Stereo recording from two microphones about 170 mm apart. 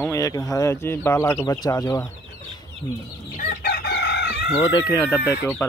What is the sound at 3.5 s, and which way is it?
Chicken, 65° left (ahead or behind).